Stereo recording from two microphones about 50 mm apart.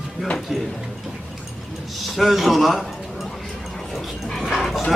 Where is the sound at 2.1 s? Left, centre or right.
Centre.